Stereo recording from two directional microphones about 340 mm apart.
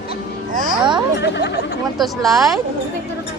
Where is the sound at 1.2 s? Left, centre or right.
Left.